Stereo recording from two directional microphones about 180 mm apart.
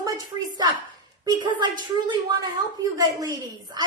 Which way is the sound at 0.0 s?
20° right (ahead or behind).